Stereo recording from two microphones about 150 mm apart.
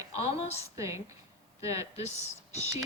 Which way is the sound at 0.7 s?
20° right (ahead or behind).